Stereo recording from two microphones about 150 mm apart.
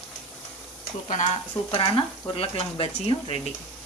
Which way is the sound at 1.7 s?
35° left (ahead or behind).